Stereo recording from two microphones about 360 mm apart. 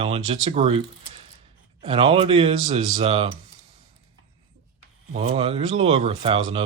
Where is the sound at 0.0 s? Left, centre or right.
Centre.